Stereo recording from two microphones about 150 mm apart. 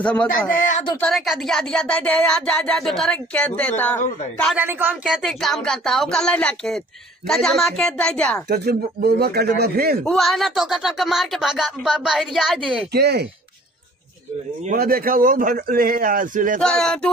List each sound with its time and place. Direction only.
0.0 s a man's voice: 10° left (ahead or behind)
4.6 s speech: 15° right (ahead or behind); by 8.4 s 5° left (ahead or behind)
8.5 s speech: 90° right
10.0 s speech: centre (ahead or behind)
12.9 s speech: 90° right
14.8 s a man's voice: 75° right (ahead or behind)
16.6 s speech: 5° left (ahead or behind)